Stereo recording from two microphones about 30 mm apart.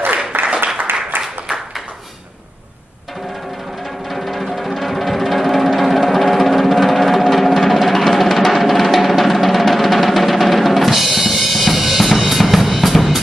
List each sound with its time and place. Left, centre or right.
0.3 s applause: right
4.1 s music: centre